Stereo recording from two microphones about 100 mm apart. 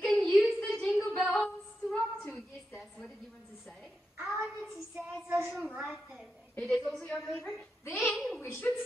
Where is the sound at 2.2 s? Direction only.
10° left (ahead or behind).